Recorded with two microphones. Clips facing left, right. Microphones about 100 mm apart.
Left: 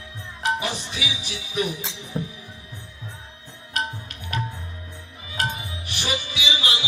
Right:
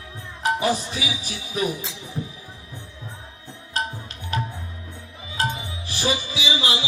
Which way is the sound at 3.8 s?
30° right (ahead or behind).